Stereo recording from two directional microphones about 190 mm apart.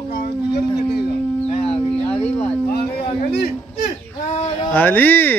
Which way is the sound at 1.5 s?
30° left (ahead or behind).